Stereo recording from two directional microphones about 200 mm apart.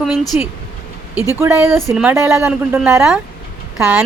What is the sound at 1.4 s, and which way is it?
A woman's voice, 10° right (ahead or behind).